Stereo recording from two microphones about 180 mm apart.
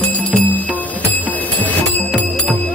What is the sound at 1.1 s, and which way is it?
Music, 10° left (ahead or behind).